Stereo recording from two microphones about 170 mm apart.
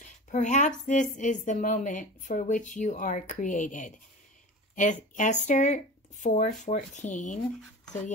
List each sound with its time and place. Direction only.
0.0 s speech: 45° left (ahead or behind)